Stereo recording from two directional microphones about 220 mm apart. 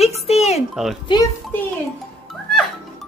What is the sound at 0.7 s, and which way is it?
Speech, centre (ahead or behind).